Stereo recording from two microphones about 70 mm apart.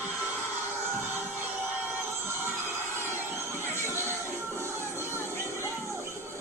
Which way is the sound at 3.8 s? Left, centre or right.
Right.